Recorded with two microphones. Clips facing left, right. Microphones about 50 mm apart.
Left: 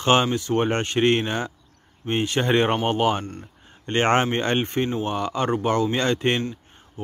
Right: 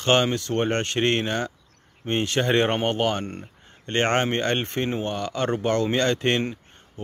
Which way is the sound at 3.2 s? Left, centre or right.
Right.